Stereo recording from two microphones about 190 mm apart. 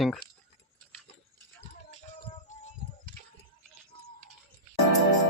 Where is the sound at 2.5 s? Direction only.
40° left (ahead or behind).